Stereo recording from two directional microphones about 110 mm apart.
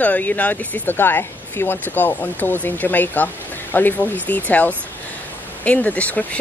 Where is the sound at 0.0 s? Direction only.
15° left (ahead or behind).